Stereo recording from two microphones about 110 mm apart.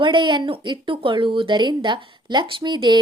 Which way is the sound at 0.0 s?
45° right (ahead or behind).